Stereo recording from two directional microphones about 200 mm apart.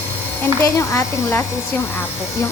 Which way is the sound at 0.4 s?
15° left (ahead or behind).